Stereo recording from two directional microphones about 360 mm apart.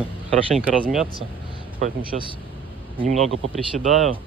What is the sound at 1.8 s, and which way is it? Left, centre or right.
Speech, centre.